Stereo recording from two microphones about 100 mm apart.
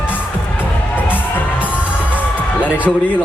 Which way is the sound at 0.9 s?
20° left (ahead or behind).